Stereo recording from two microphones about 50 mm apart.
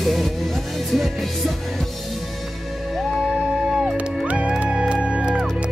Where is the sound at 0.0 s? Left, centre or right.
Centre.